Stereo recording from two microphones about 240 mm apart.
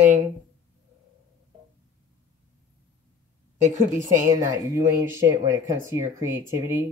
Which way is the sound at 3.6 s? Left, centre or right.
Right.